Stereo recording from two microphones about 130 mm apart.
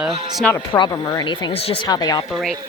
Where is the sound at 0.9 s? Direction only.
30° left (ahead or behind).